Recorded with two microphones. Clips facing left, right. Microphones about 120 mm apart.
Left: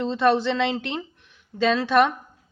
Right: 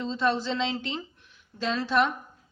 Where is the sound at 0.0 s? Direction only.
70° left (ahead or behind).